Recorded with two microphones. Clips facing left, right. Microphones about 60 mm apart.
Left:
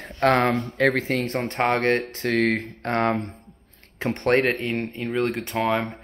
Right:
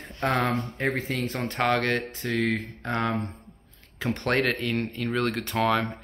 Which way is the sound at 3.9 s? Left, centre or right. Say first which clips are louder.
Left 5 dB; left.